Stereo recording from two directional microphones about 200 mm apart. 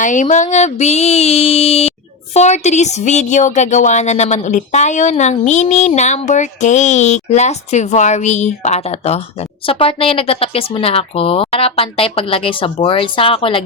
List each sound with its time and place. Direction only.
0.0 s speech: 40° left (ahead or behind)